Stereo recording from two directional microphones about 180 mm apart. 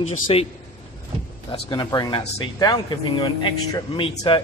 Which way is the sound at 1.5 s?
25° left (ahead or behind).